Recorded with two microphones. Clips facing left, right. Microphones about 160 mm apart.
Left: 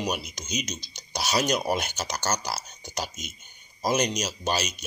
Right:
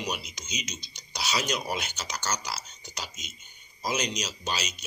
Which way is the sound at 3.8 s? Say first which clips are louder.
Left 5 dB; 50° left (ahead or behind).